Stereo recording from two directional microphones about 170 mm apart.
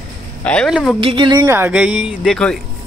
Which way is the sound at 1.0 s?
30° right (ahead or behind).